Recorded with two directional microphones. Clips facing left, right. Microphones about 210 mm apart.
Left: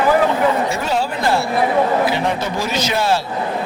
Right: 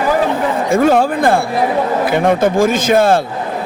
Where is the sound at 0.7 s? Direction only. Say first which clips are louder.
Right 9 dB; 50° right (ahead or behind).